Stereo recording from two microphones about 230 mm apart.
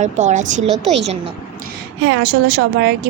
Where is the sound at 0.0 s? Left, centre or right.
Right.